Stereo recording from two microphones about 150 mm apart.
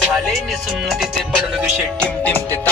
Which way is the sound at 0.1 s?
Centre (ahead or behind).